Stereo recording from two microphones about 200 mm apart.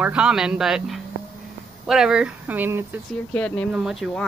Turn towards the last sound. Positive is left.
turn(degrees=0)  # may be behind; listen again after turning